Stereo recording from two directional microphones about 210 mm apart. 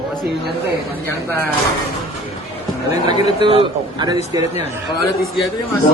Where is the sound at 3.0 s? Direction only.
30° left (ahead or behind).